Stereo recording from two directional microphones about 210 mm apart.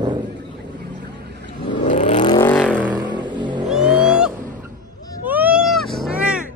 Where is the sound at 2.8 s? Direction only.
10° right (ahead or behind).